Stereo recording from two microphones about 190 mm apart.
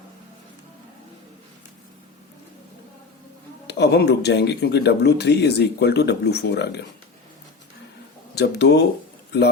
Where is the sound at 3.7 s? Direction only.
60° left (ahead or behind).